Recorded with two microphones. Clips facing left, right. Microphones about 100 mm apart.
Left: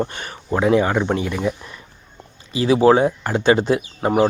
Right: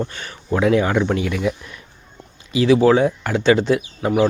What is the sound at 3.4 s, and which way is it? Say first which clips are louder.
Speech: right 1 dB; 45° left (ahead or behind).